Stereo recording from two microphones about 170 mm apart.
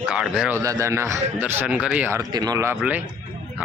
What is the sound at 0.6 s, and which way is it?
Speech, 20° right (ahead or behind).